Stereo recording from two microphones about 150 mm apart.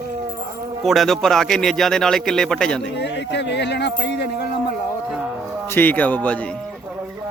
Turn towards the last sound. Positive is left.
turn(degrees=10)  # may be behind; listen again after turning